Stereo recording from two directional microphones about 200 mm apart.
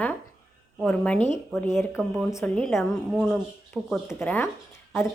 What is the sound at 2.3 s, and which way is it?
Speech, 15° left (ahead or behind).